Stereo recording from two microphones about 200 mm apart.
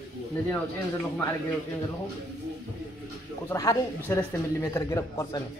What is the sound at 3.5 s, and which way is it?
A man's voice, 15° left (ahead or behind).